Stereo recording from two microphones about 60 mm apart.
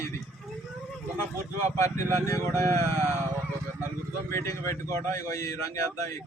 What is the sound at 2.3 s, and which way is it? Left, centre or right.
Speech, left.